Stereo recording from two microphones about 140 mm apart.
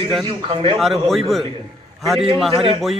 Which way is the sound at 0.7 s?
Centre (ahead or behind).